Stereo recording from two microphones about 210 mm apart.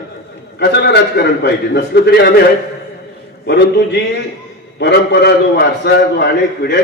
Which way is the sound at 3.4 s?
50° left (ahead or behind).